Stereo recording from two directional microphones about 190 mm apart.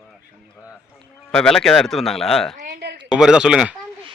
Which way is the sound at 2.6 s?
55° right (ahead or behind).